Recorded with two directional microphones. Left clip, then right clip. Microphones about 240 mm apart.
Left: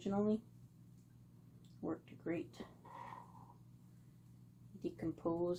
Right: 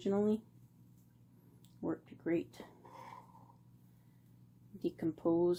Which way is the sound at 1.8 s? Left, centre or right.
Right.